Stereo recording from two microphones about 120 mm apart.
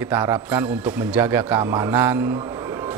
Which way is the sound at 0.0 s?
20° right (ahead or behind).